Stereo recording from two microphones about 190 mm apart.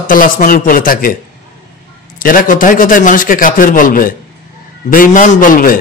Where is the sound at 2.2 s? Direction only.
45° left (ahead or behind).